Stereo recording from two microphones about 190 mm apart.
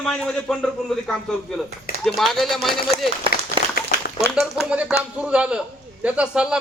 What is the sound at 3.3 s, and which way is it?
Applause, 50° left (ahead or behind).